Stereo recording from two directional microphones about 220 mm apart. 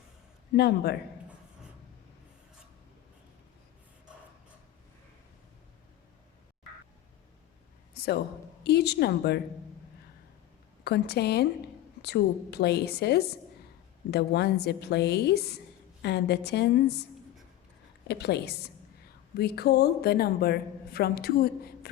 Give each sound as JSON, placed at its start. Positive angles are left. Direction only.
{"t": 0.5, "sound": "a woman's voice", "side_deg": 45}
{"t": 7.9, "sound": "a sound", "side_deg": 45}
{"t": 8.6, "sound": "a woman's voice", "side_deg": 50}
{"t": 10.8, "sound": "a woman's voice", "side_deg": 50}
{"t": 18.1, "sound": "a woman's voice", "side_deg": 50}